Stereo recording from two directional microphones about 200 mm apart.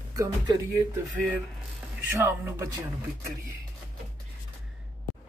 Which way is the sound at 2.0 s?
10° right (ahead or behind).